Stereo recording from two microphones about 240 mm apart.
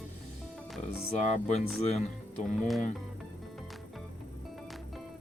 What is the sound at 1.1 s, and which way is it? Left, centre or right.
Speech, left.